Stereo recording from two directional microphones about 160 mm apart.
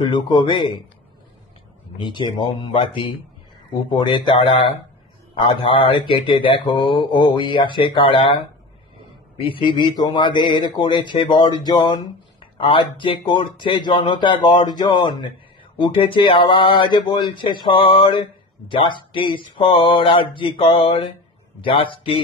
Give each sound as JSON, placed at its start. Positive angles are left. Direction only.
{"t": 0.0, "sound": "speech", "side_deg": 30}
{"t": 2.0, "sound": "speech", "side_deg": 30}
{"t": 9.4, "sound": "speech", "side_deg": 30}